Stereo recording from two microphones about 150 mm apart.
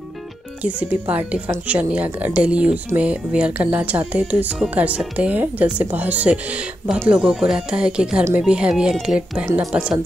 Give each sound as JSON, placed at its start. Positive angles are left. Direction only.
{"t": 0.6, "sound": "speech", "side_deg": -10}
{"t": 9.5, "sound": "speech", "side_deg": -15}